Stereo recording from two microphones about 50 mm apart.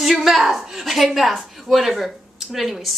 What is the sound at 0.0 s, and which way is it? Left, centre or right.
A woman's voice, centre.